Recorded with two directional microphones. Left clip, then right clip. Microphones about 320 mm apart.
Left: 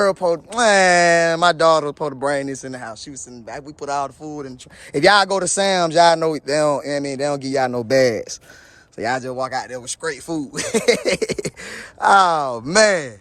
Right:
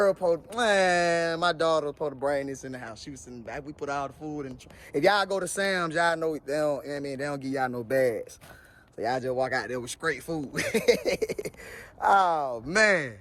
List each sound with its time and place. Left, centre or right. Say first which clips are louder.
0.0 s speech: left 6 dB; left
4.9 s speech: left 10 dB; left
9.0 s speech: left 7 dB; left
9.6 s speech: left 4 dB; centre
10.8 s speech: left 7 dB; left
12.6 s speech: left 8 dB; centre